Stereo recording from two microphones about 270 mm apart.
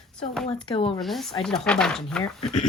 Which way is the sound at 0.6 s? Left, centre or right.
Centre.